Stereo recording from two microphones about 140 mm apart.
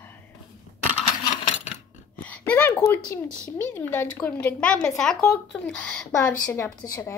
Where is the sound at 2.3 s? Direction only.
10° left (ahead or behind).